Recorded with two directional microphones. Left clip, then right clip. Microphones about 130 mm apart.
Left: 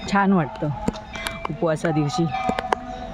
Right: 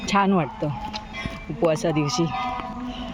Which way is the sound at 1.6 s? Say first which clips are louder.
Right 1 dB; 20° left (ahead or behind).